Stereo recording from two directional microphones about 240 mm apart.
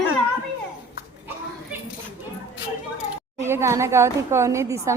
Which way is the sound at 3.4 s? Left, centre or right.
Centre.